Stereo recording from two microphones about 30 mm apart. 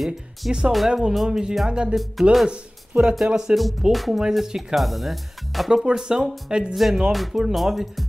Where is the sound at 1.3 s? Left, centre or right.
Right.